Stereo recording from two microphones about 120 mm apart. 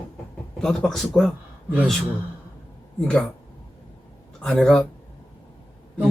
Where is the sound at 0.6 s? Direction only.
5° left (ahead or behind).